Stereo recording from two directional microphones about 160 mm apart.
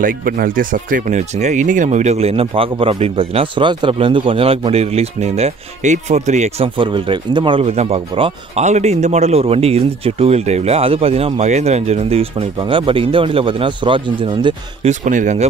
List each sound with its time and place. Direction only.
0.0 s speech: 65° right (ahead or behind); by 6.7 s 45° right (ahead or behind)
6.8 s speech: 30° right (ahead or behind)
14.9 s speech: 50° right (ahead or behind)